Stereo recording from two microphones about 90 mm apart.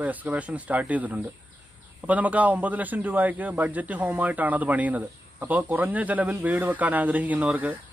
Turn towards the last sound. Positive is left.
turn(degrees=-15)  # may be behind; listen again after turning